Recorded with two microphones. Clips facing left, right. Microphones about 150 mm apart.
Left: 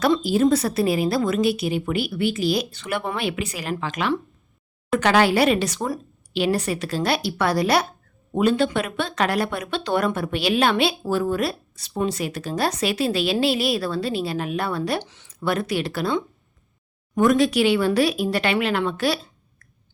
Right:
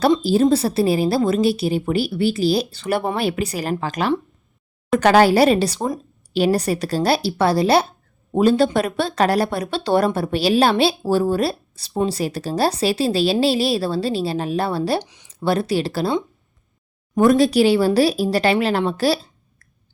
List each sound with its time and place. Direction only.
0.2 s speech: 30° right (ahead or behind)
15.0 s speech: 15° right (ahead or behind)
15.3 s speech: 30° right (ahead or behind)
17.2 s speech: 35° right (ahead or behind)